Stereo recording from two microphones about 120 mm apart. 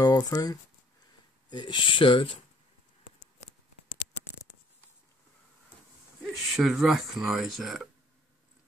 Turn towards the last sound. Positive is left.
turn(degrees=0)  # may be behind; listen again after turning